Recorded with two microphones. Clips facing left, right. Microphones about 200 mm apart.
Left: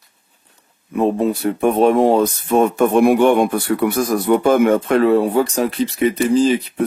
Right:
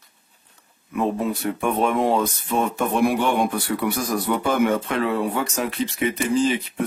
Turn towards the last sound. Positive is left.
turn(degrees=35)  # may be behind; listen again after turning